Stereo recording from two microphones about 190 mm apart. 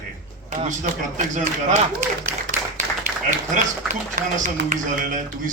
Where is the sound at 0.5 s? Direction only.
40° right (ahead or behind).